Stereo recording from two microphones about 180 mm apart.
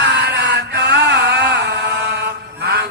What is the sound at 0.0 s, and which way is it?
Chant, 70° right (ahead or behind).